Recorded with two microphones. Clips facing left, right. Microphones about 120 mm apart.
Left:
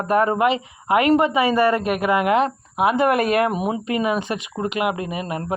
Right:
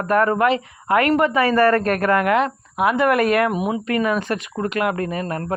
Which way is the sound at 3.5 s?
35° left (ahead or behind).